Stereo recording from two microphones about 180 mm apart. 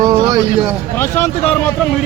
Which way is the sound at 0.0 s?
20° right (ahead or behind).